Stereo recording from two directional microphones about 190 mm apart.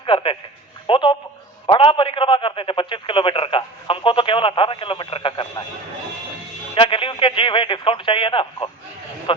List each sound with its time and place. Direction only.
0.0 s a man's voice: 25° left (ahead or behind)
6.7 s speech: 25° left (ahead or behind)